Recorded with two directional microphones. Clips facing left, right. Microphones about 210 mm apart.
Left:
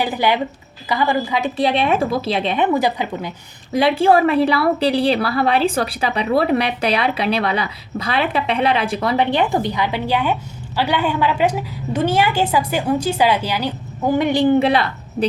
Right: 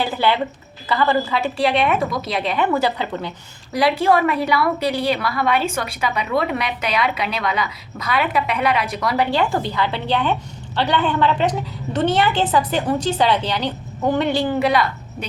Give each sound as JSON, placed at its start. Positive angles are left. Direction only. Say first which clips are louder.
{"t": 0.0, "sound": "a woman's voice", "louder": "left 1 dB", "side_deg": 15}
{"t": 3.7, "sound": "a woman's voice", "louder": "left 3 dB", "side_deg": 25}